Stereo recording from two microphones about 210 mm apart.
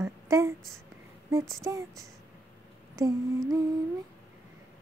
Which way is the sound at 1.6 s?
15° right (ahead or behind).